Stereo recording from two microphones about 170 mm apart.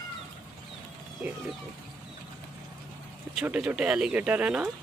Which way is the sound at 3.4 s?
5° right (ahead or behind).